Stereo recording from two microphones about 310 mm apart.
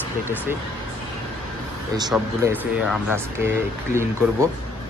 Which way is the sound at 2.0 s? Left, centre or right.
Centre.